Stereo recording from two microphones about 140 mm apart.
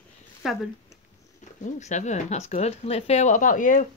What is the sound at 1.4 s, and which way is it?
Speech, 55° left (ahead or behind).